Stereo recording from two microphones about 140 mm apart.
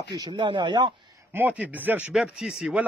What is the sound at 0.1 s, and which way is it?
Speech, 30° right (ahead or behind).